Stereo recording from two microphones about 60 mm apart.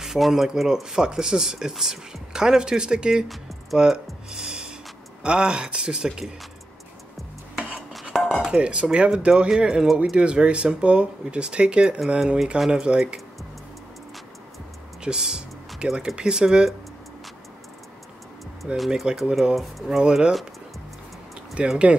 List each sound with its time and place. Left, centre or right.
0.0 s speech: centre
7.9 s dishes: centre
8.5 s speech: centre
12.5 s speech: centre
12.8 s speech: centre
15.0 s speech: centre
18.9 s speech: centre
20.0 s speech: centre
21.6 s speech: centre